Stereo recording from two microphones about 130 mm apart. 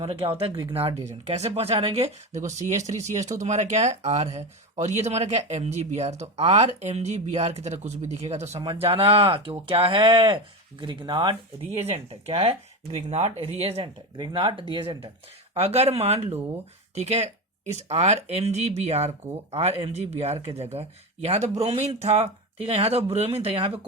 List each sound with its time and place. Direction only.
0.0 s speech: 45° right (ahead or behind)
8.6 s speech: 45° right (ahead or behind)
11.9 s speech: 50° right (ahead or behind)
14.2 s speech: 35° right (ahead or behind)
15.5 s speech: 50° right (ahead or behind)